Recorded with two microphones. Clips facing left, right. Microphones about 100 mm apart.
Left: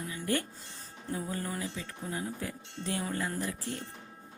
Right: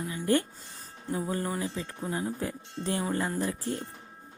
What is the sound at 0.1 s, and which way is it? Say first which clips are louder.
Music: right 6 dB; 30° right (ahead or behind).